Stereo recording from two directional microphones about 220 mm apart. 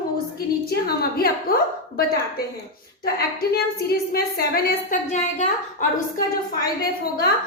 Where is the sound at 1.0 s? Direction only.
45° left (ahead or behind).